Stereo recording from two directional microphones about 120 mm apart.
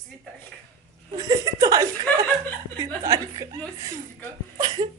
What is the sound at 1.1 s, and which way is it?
Speech, 30° right (ahead or behind).